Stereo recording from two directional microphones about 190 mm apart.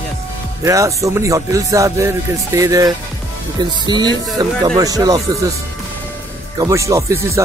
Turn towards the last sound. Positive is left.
turn(degrees=-15)  # may be behind; listen again after turning